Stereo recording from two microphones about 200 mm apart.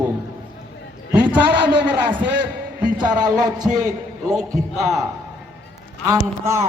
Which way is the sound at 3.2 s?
40° right (ahead or behind).